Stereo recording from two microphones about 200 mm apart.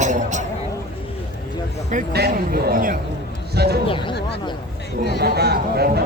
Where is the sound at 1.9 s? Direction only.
45° right (ahead or behind).